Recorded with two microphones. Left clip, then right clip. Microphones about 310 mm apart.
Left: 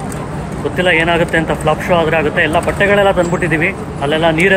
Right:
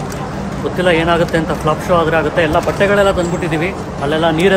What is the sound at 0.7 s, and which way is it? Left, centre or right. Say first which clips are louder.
Speech: left 1 dB; centre.